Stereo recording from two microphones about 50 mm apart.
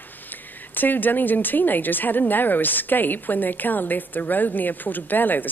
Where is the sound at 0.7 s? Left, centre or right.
Left.